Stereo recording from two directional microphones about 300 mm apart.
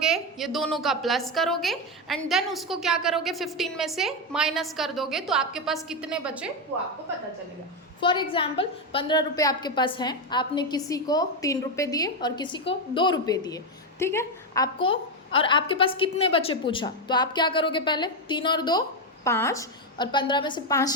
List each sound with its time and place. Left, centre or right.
0.0 s a woman's voice: centre
8.0 s a woman's voice: centre